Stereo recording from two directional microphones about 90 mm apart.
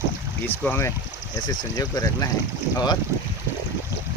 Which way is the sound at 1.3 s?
45° left (ahead or behind).